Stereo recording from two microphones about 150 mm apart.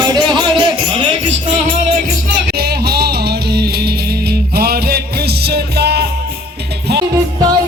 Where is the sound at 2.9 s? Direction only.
90° right.